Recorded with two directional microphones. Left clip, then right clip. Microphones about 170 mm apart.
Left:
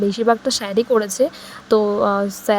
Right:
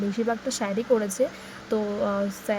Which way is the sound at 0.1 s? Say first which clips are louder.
Left 10 dB; 40° left (ahead or behind).